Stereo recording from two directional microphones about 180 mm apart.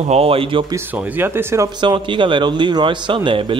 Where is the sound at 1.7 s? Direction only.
25° right (ahead or behind).